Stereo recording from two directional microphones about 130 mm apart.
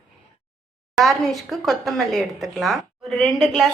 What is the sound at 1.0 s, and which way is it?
A woman's voice, centre (ahead or behind).